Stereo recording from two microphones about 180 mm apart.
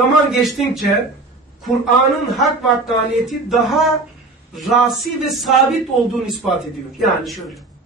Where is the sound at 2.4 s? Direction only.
Centre (ahead or behind).